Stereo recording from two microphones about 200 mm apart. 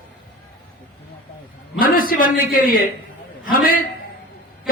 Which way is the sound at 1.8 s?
45° left (ahead or behind).